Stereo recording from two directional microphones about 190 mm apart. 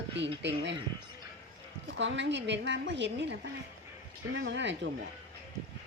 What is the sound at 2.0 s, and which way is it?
A woman's voice, 70° right (ahead or behind).